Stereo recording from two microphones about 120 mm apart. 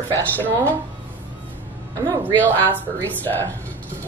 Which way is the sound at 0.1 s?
15° left (ahead or behind).